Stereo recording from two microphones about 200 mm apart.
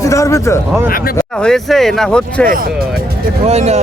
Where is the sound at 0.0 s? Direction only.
15° left (ahead or behind).